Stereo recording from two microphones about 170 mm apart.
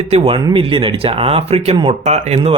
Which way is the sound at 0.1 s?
30° right (ahead or behind).